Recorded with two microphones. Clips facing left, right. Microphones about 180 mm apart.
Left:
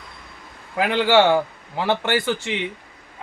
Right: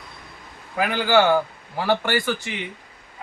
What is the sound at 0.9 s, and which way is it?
Speech, 25° left (ahead or behind).